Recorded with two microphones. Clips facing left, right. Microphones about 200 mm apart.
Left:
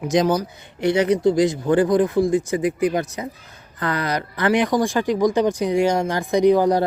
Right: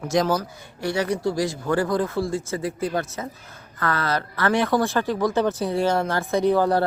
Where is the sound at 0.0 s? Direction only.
20° left (ahead or behind).